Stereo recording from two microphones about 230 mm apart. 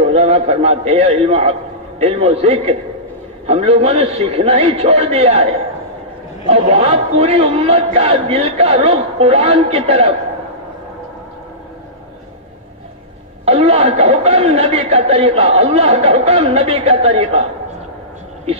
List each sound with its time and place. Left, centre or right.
0.0 s a man's voice: right
13.5 s speech: right